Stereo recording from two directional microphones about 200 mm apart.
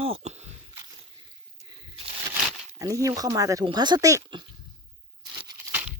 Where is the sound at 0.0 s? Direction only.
30° right (ahead or behind).